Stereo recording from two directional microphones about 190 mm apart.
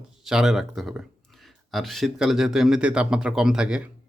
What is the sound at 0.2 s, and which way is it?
Speech, centre (ahead or behind).